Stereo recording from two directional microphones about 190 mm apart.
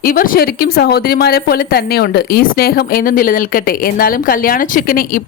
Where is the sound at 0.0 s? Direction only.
50° left (ahead or behind).